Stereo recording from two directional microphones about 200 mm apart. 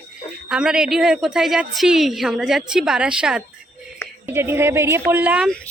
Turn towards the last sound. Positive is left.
turn(degrees=-5)  # may be behind; listen again after turning